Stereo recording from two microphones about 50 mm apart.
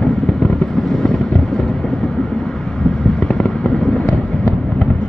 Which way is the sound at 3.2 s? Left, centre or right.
Centre.